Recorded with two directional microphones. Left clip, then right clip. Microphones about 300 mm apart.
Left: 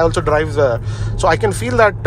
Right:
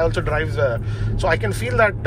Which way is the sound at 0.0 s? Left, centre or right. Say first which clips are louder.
Left 6 dB; centre.